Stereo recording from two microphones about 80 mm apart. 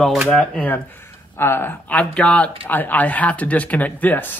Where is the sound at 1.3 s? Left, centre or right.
Left.